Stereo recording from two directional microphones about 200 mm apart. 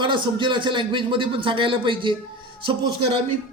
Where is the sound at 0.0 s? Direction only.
25° right (ahead or behind).